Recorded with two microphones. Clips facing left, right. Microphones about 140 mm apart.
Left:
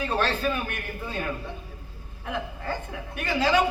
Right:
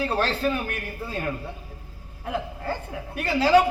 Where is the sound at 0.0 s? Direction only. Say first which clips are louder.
Right 2 dB; 35° right (ahead or behind).